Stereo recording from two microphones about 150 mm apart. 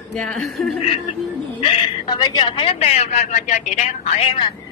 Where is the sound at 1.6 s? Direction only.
30° left (ahead or behind).